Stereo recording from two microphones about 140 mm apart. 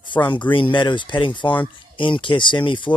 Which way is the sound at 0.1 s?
35° left (ahead or behind).